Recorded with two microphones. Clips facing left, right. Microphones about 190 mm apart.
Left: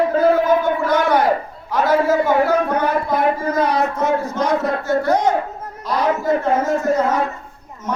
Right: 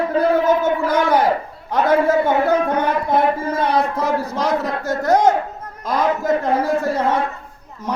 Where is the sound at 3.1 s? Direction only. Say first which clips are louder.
Even; 30° right (ahead or behind).